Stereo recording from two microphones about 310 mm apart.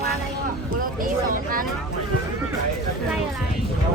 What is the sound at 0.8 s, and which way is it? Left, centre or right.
Speech, right.